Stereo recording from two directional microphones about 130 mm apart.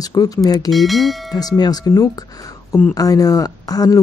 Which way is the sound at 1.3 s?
30° left (ahead or behind).